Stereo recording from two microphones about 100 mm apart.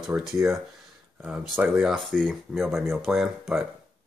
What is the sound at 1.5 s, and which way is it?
Speech, 15° right (ahead or behind).